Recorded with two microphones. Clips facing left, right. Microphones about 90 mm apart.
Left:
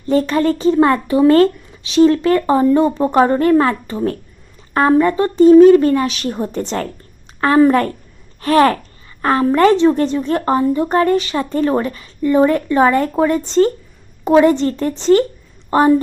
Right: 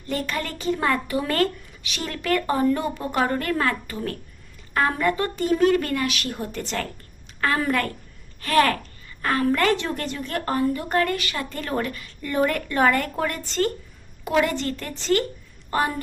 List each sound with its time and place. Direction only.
0.0 s a woman's voice: 30° left (ahead or behind)